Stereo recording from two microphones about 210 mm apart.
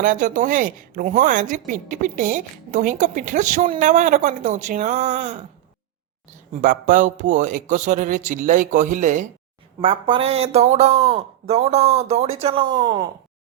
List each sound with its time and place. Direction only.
0.0 s a woman's voice: 40° right (ahead or behind)
6.6 s a woman's voice: 40° right (ahead or behind)
9.8 s a man's voice: 25° right (ahead or behind)